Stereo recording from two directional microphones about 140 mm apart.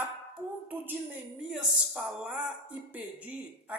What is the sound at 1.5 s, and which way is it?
Speech, 10° right (ahead or behind).